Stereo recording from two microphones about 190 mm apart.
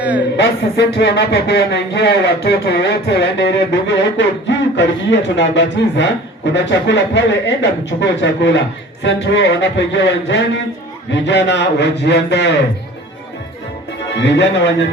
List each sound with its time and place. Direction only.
0.0 s a sound: 10° right (ahead or behind)
0.8 s a man's voice: 65° left (ahead or behind)
14.2 s a man's voice: 65° left (ahead or behind)